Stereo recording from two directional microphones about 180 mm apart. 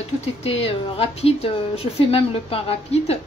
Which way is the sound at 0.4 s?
35° left (ahead or behind).